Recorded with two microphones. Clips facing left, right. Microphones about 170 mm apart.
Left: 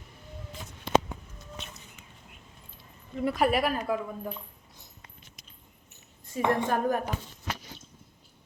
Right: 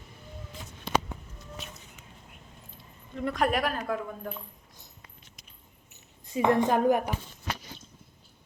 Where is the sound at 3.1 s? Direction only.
5° left (ahead or behind).